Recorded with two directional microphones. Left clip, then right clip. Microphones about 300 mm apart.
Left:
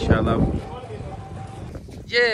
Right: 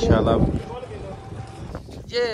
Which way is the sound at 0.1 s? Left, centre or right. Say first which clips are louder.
Even; centre.